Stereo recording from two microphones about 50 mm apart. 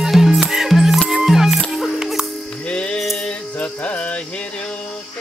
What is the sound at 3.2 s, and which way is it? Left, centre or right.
Music, left.